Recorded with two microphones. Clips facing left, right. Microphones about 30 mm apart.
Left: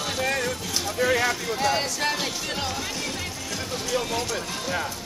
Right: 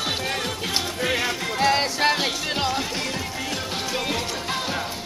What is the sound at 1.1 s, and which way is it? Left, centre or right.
Music, centre.